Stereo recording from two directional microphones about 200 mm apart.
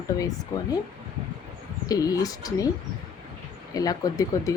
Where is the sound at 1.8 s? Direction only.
20° left (ahead or behind).